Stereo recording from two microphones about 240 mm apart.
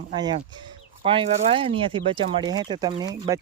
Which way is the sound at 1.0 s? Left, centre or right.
Right.